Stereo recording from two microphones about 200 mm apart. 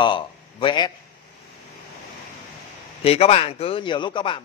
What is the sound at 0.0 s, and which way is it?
Speech, 25° left (ahead or behind).